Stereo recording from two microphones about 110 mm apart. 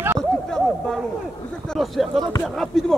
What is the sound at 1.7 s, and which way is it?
Speech, centre (ahead or behind).